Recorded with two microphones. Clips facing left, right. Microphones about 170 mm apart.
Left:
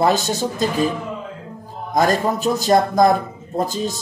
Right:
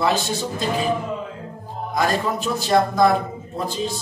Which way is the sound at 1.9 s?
40° left (ahead or behind).